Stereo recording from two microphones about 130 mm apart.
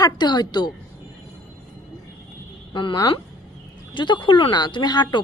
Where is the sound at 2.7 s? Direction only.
30° left (ahead or behind).